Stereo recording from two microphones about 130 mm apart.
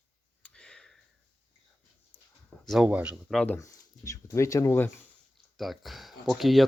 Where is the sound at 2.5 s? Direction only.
10° left (ahead or behind).